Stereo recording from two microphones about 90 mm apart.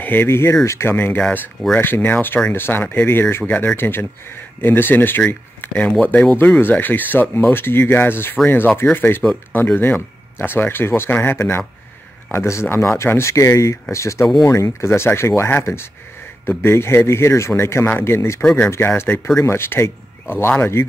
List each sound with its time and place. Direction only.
0.0 s speech: 25° left (ahead or behind)
18.4 s speech: 10° left (ahead or behind)
18.7 s speech: 25° left (ahead or behind)